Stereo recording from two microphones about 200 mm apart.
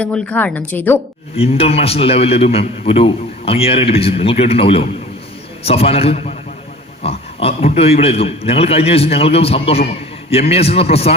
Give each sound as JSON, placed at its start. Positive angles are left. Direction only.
{"t": 0.0, "sound": "a woman's voice", "side_deg": 5}
{"t": 1.4, "sound": "a man's voice", "side_deg": 30}